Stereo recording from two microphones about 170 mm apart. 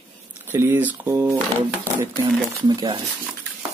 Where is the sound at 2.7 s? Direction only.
25° right (ahead or behind).